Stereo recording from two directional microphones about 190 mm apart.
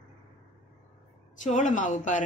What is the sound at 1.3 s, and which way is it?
Speech, 40° left (ahead or behind).